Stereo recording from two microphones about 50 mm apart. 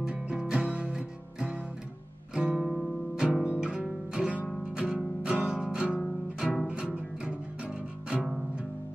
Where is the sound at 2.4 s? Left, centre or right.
Right.